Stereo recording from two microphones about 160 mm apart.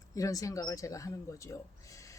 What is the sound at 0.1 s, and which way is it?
Speech, 20° left (ahead or behind).